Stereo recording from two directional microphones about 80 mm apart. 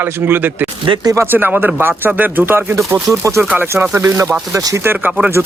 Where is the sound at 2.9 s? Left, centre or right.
Right.